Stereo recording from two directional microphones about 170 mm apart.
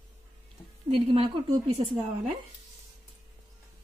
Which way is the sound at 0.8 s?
40° right (ahead or behind).